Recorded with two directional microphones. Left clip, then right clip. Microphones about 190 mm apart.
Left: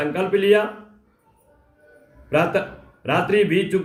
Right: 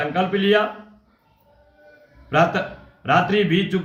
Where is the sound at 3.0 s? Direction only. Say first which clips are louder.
Right 1 dB; 10° left (ahead or behind).